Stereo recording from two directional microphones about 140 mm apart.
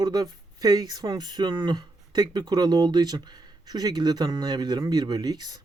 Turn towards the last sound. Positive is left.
turn(degrees=-30)  # may be behind; listen again after turning